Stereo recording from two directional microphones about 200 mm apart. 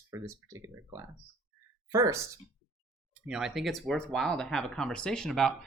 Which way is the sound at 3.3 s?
5° right (ahead or behind).